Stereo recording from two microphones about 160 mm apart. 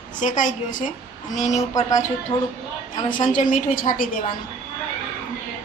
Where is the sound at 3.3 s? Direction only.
55° left (ahead or behind).